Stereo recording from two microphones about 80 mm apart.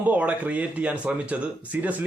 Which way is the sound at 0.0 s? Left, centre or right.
Centre.